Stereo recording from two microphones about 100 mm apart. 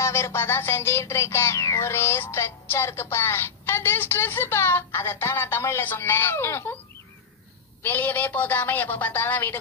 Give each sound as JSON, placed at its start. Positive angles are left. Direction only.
{"t": 0.0, "sound": "music", "side_deg": 25}
{"t": 7.8, "sound": "a woman's voice", "side_deg": 15}